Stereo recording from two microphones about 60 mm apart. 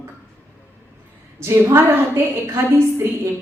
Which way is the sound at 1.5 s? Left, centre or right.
Right.